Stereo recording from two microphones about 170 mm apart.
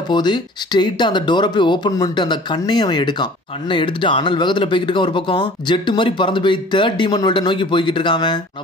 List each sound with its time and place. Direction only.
0.1 s speech: 25° left (ahead or behind)